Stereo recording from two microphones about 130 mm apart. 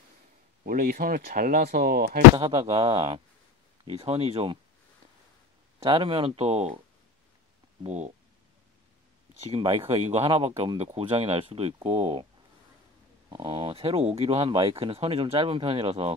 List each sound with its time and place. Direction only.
0.7 s speech: 90° right
2.3 s speech: 45° right (ahead or behind)
5.8 s speech: 45° right (ahead or behind)
7.8 s speech: 60° right (ahead or behind)
9.5 s speech: 45° right (ahead or behind)
13.4 s speech: 45° right (ahead or behind)